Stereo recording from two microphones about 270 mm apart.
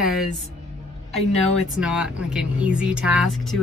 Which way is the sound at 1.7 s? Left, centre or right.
Centre.